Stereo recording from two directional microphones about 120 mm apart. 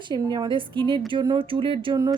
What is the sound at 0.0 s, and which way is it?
A woman's voice, 40° right (ahead or behind).